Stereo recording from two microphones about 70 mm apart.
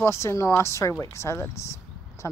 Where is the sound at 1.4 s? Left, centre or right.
Left.